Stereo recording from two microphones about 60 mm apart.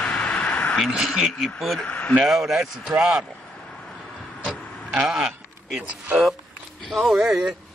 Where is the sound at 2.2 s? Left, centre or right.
Centre.